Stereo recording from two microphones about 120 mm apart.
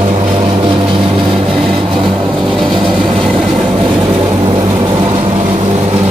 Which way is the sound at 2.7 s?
40° right (ahead or behind).